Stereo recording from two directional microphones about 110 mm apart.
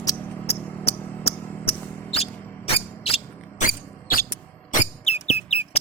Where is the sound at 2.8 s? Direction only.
60° left (ahead or behind).